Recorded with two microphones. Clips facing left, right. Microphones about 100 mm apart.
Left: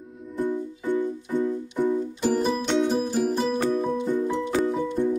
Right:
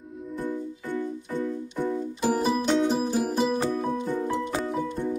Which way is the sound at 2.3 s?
5° right (ahead or behind).